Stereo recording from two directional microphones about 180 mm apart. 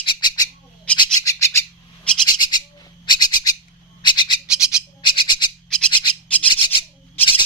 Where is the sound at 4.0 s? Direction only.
25° left (ahead or behind).